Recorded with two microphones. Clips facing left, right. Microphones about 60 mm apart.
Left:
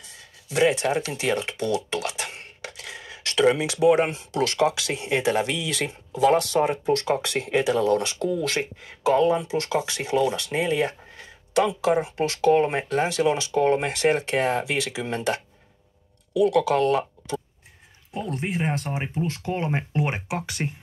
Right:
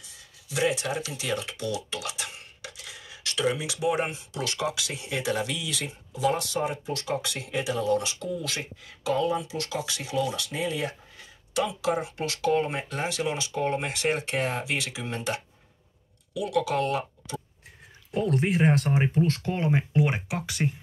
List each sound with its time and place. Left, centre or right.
0.0 s a sound: left
4.2 s speech: left
13.5 s speech: left
19.1 s speech: centre